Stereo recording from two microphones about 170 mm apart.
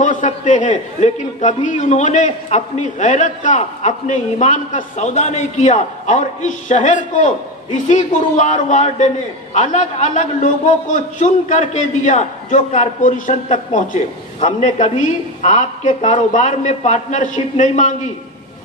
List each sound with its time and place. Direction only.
0.0 s a man's voice: 45° left (ahead or behind)